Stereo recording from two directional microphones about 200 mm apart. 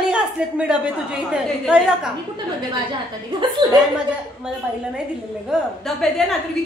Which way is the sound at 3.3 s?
25° right (ahead or behind).